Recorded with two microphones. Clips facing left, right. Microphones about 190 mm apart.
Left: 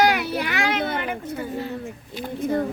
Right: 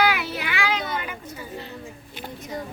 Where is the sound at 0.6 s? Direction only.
55° left (ahead or behind).